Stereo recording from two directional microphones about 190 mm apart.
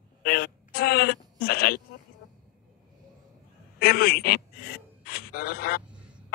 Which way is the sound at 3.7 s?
55° left (ahead or behind).